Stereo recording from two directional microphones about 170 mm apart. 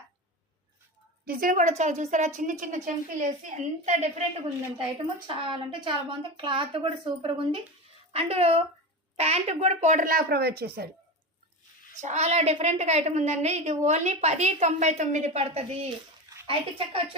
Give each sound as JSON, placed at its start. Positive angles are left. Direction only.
{"t": 1.2, "sound": "a woman's voice", "side_deg": -60}
{"t": 12.0, "sound": "a woman's voice", "side_deg": -40}